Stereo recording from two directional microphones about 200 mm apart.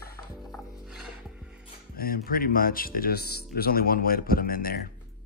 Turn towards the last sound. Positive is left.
turn(degrees=45)  # may be behind; listen again after turning